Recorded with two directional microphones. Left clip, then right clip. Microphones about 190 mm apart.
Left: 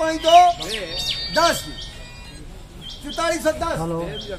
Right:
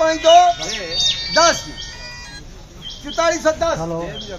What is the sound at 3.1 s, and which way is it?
Speech, 20° left (ahead or behind).